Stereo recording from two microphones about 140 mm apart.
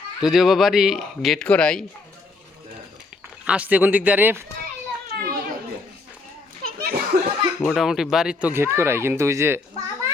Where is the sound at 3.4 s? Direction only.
10° right (ahead or behind).